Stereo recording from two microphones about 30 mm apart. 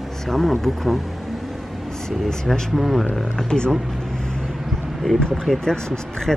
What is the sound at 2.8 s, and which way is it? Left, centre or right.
Speech, centre.